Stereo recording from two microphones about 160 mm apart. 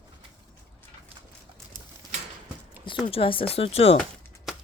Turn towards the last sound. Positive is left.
turn(degrees=0)  # may be behind; listen again after turning